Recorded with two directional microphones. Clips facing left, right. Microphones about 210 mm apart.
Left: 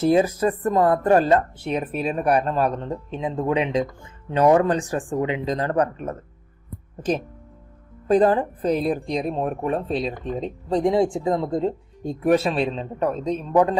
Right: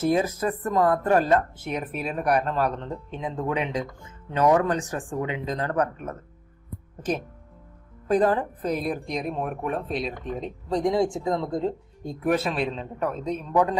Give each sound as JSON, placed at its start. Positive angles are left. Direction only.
{"t": 0.1, "sound": "speech", "side_deg": 30}
{"t": 8.0, "sound": "speech", "side_deg": 30}